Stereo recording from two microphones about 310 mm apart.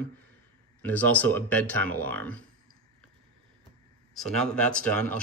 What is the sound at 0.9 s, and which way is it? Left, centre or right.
Speech, centre.